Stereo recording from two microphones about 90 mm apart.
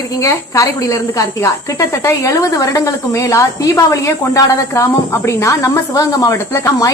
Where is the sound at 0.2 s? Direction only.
35° left (ahead or behind).